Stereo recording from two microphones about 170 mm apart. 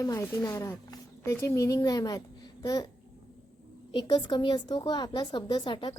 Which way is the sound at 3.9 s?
25° left (ahead or behind).